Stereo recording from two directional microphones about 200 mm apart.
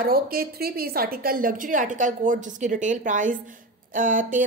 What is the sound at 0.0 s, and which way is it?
A woman's voice, 50° right (ahead or behind).